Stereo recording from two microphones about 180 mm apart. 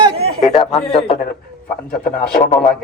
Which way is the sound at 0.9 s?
30° left (ahead or behind).